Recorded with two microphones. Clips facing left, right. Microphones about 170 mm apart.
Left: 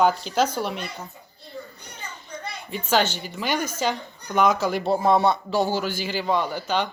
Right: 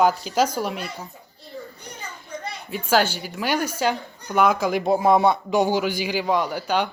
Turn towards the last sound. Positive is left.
turn(degrees=-10)  # may be behind; listen again after turning